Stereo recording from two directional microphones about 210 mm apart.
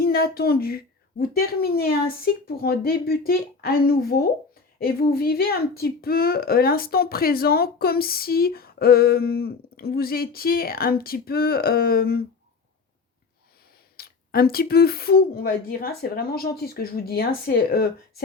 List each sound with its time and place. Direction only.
0.0 s speech: 45° left (ahead or behind)
13.9 s speech: 45° left (ahead or behind)